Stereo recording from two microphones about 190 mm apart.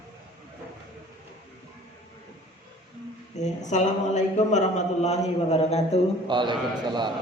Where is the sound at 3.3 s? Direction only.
40° left (ahead or behind).